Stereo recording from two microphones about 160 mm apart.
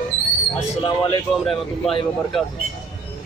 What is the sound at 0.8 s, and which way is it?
Speech, 30° left (ahead or behind).